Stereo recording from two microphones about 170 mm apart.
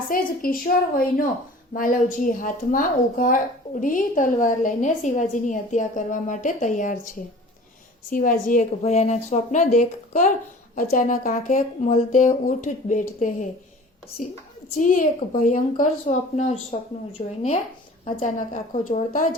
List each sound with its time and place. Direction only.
0.1 s a woman's voice: 55° left (ahead or behind)
8.1 s a woman's voice: 55° left (ahead or behind)
14.8 s a woman's voice: 50° left (ahead or behind); by 17.3 s 35° left (ahead or behind)
18.2 s a woman's voice: 50° left (ahead or behind)